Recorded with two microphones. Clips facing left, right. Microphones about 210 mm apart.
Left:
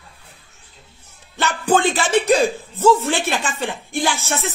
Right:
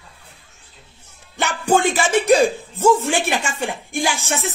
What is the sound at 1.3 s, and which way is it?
Speech, 10° right (ahead or behind).